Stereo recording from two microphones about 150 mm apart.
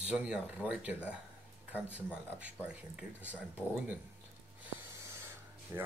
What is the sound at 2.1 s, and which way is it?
Speech, 5° right (ahead or behind).